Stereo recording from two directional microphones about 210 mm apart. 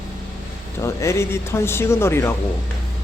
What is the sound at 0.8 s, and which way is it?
Speech, 15° left (ahead or behind).